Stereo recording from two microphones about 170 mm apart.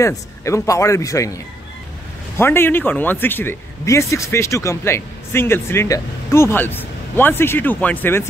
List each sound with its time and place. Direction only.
0.0 s speech: 20° left (ahead or behind)